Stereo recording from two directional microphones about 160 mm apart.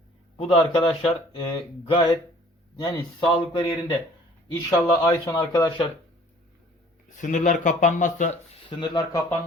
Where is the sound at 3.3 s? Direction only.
30° left (ahead or behind).